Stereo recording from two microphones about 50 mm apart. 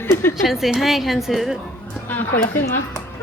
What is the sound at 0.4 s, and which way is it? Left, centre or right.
A woman's voice, centre.